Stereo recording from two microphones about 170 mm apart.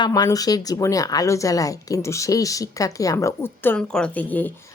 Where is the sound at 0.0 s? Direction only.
20° left (ahead or behind).